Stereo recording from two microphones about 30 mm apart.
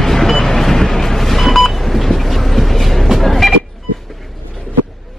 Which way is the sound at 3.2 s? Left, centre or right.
Centre.